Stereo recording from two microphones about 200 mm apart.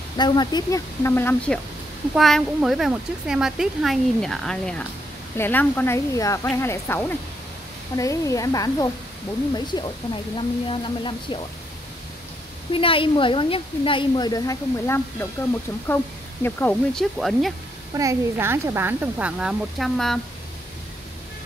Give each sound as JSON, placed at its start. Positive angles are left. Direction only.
{"t": 0.2, "sound": "speech", "side_deg": 20}
{"t": 12.7, "sound": "speech", "side_deg": 25}
{"t": 16.4, "sound": "speech", "side_deg": 10}
{"t": 17.9, "sound": "speech", "side_deg": -15}